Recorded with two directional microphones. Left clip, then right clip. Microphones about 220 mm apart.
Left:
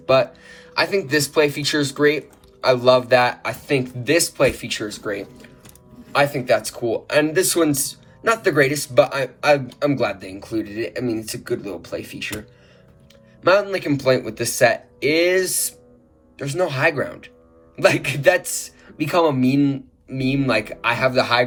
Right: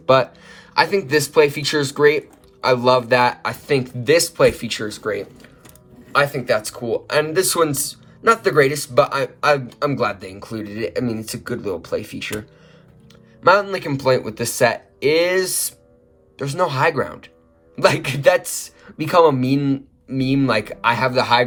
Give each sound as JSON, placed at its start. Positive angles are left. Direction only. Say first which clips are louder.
{"t": 0.0, "sound": "speech", "louder": "right 2 dB", "side_deg": -25}
{"t": 13.4, "sound": "speech", "louder": "right 2 dB", "side_deg": -20}